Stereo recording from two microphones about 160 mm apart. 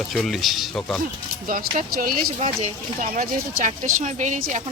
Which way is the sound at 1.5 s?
65° right (ahead or behind).